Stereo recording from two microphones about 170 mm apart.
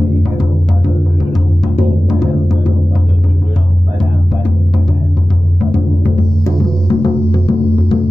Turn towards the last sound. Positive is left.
turn(degrees=25)  # may be behind; listen again after turning